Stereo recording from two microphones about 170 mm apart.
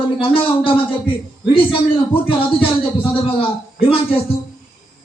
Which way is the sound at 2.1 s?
30° left (ahead or behind).